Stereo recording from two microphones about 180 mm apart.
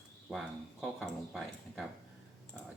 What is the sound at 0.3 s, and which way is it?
Speech, centre (ahead or behind).